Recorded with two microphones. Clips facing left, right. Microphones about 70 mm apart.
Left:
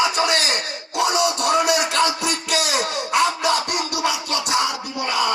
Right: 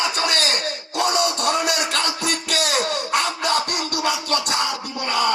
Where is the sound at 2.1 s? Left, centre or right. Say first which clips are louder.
Left 1 dB; right.